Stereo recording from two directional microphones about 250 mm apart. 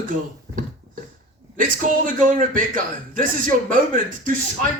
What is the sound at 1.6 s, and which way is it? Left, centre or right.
A man's voice, right.